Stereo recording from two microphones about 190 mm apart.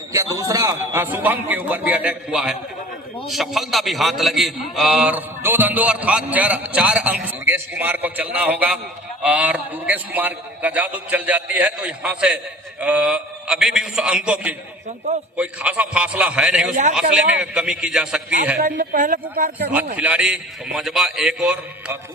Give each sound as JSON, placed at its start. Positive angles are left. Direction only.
{"t": 0.1, "sound": "a man's voice", "side_deg": -15}
{"t": 18.5, "sound": "speech", "side_deg": -45}
{"t": 20.0, "sound": "a man's voice", "side_deg": -5}